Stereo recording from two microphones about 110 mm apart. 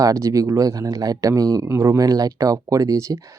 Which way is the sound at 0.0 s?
30° right (ahead or behind).